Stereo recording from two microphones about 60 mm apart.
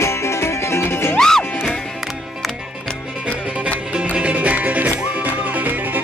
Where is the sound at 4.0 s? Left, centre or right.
Centre.